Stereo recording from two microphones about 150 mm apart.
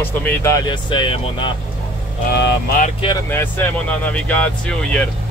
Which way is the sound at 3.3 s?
10° left (ahead or behind).